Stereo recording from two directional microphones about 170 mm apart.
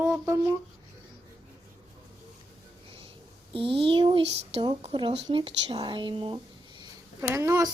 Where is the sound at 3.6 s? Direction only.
30° right (ahead or behind).